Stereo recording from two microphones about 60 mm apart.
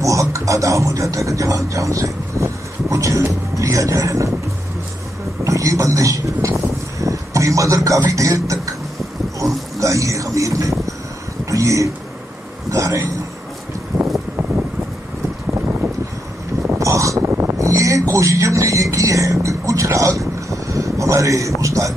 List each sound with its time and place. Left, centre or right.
0.0 s speech: right
5.4 s speech: right
9.8 s a man's voice: right
13.9 s wind: right
16.7 s a sound: right
17.3 s a sound: right
17.6 s speech: right